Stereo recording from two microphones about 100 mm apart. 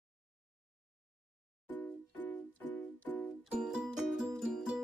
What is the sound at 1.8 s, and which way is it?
Music, 20° left (ahead or behind).